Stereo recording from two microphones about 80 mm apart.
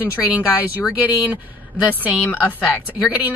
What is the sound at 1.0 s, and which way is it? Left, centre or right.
Speech, right.